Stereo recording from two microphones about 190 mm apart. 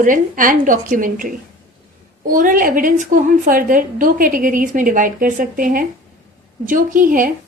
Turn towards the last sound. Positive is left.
turn(degrees=-45)  # may be behind; listen again after turning